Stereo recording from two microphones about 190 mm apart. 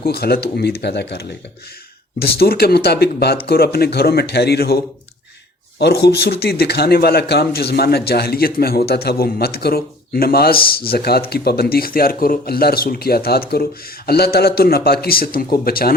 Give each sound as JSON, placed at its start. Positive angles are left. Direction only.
{"t": 0.0, "sound": "a man's voice", "side_deg": 55}
{"t": 5.8, "sound": "a man's voice", "side_deg": 60}